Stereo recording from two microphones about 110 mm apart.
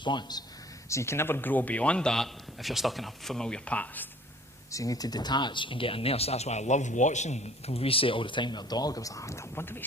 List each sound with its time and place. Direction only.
0.0 s speech: 45° left (ahead or behind)
0.9 s a man's voice: 25° left (ahead or behind)
4.7 s speech: 30° left (ahead or behind)